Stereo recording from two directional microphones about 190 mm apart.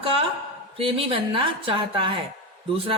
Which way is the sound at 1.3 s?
25° right (ahead or behind).